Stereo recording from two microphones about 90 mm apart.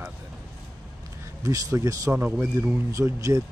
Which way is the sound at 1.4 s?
35° right (ahead or behind).